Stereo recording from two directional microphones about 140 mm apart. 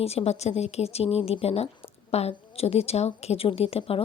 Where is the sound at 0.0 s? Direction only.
45° left (ahead or behind).